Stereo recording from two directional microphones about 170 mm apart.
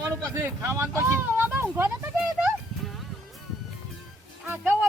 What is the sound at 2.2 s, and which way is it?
Music, 5° right (ahead or behind).